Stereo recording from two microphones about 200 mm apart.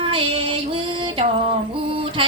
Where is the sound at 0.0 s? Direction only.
25° right (ahead or behind).